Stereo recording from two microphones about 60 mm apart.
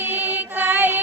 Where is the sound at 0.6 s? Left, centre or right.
Right.